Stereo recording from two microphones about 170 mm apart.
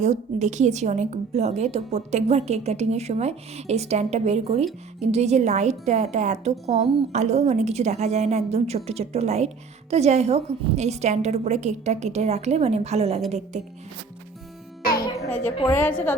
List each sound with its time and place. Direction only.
0.0 s a woman's voice: 45° right (ahead or behind)
15.6 s a woman's voice: 10° left (ahead or behind)